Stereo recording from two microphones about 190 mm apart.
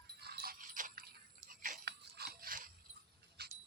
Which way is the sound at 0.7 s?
45° right (ahead or behind).